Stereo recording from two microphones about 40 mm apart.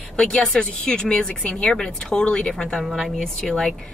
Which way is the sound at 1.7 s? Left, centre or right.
Centre.